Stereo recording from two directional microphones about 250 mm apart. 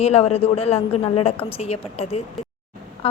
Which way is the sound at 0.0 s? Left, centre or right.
Left.